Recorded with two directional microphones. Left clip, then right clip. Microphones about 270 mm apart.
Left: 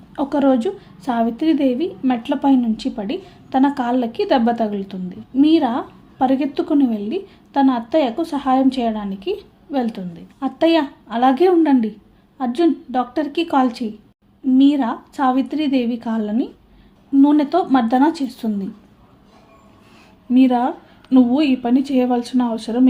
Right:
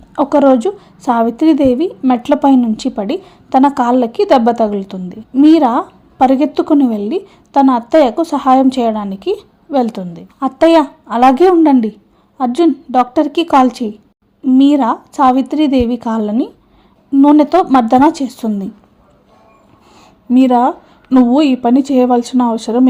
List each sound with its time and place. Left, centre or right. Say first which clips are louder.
0.2 s a woman's voice: right 8 dB; right
20.3 s a woman's voice: right 6 dB; right